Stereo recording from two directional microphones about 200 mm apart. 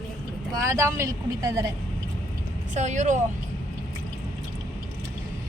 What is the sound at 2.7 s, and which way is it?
Speech, 35° right (ahead or behind).